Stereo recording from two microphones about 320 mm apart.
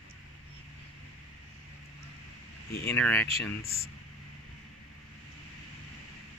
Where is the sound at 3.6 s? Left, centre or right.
Left.